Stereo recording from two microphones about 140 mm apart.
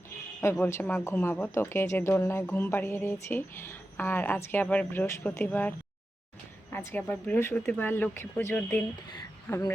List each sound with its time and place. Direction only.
0.6 s speech: 15° left (ahead or behind)